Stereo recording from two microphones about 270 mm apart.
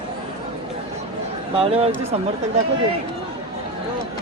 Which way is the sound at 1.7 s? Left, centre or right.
Right.